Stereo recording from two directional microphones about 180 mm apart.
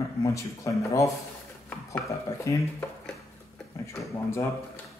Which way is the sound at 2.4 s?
15° left (ahead or behind).